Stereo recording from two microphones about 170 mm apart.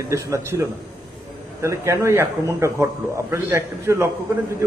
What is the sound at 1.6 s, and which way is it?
A man's voice, 15° right (ahead or behind).